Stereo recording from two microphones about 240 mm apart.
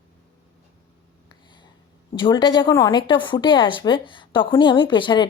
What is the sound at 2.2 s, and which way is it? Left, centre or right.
A woman's voice, centre.